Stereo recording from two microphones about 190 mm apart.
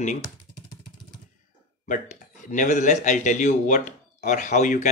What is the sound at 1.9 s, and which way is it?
Speech, 40° left (ahead or behind).